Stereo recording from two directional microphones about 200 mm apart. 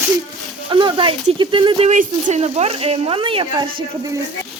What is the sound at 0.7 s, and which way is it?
Speech, 25° right (ahead or behind).